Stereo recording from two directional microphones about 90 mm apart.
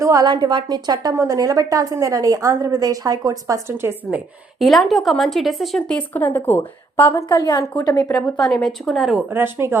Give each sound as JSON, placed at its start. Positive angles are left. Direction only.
{"t": 0.0, "sound": "a woman's voice", "side_deg": -40}
{"t": 0.3, "sound": "a woman's voice", "side_deg": -55}
{"t": 1.1, "sound": "a woman's voice", "side_deg": -35}
{"t": 3.7, "sound": "a woman's voice", "side_deg": -25}
{"t": 4.6, "sound": "speech", "side_deg": 0}
{"t": 5.9, "sound": "speech", "side_deg": 20}
{"t": 7.3, "sound": "a woman's voice", "side_deg": 50}
{"t": 8.4, "sound": "speech", "side_deg": 0}
{"t": 9.3, "sound": "a woman's voice", "side_deg": -25}